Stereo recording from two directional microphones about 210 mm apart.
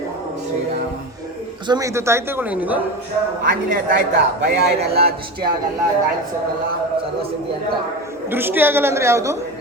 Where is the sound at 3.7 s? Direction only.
55° right (ahead or behind).